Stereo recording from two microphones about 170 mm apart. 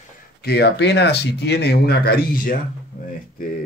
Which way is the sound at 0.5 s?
80° left.